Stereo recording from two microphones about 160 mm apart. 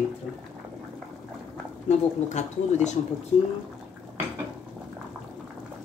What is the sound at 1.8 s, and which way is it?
Speech, 45° left (ahead or behind).